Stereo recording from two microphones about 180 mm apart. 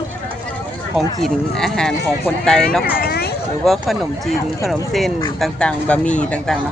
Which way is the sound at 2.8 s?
60° left (ahead or behind).